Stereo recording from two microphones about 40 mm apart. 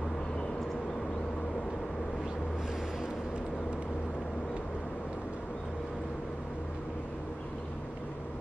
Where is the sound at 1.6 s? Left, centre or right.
Centre.